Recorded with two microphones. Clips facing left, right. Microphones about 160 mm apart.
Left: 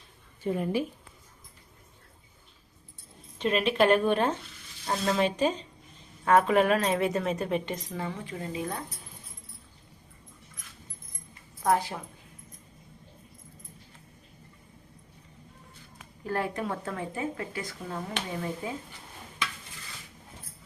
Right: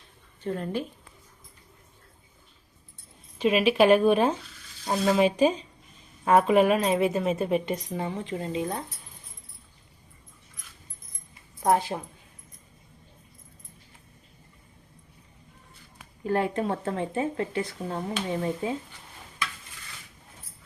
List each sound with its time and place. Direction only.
0.4 s a woman's voice: 10° left (ahead or behind)
3.3 s a woman's voice: 10° right (ahead or behind)
11.6 s speech: 20° right (ahead or behind)
16.2 s speech: 25° right (ahead or behind)